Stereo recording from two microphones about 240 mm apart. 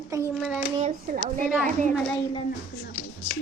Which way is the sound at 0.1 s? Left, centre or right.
Centre.